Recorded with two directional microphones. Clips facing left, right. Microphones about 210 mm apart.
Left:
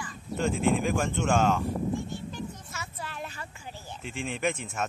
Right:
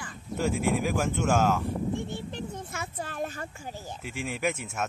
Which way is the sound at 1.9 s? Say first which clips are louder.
Right 1 dB; 60° right (ahead or behind).